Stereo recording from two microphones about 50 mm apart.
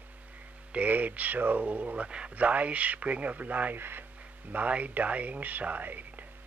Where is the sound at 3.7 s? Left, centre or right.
Right.